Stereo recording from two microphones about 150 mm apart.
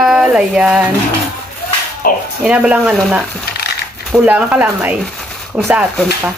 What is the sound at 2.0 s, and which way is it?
Speech, 75° left (ahead or behind).